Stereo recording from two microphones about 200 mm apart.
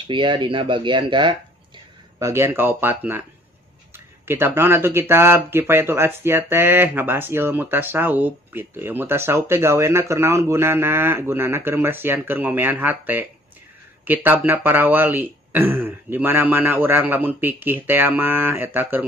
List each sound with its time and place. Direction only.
0.0 s speech: 25° right (ahead or behind)